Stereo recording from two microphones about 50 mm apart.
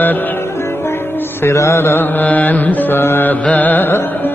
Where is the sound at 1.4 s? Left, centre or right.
Left.